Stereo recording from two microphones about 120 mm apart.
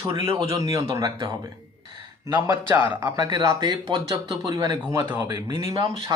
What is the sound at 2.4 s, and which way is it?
Speech, 25° right (ahead or behind).